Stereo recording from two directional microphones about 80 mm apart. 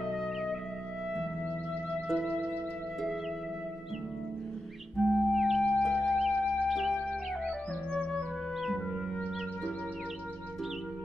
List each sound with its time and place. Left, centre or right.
0.0 s music: centre
4.9 s music: centre
7.0 s music: centre